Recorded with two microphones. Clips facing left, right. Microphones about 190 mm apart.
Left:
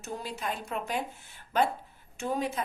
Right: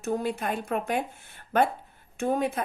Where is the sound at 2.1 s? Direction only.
55° right (ahead or behind).